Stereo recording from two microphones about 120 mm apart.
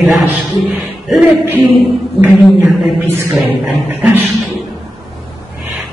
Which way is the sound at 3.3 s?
10° right (ahead or behind).